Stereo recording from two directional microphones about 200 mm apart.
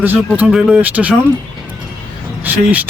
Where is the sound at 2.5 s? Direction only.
10° right (ahead or behind).